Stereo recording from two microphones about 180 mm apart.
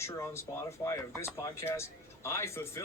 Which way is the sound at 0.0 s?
15° left (ahead or behind).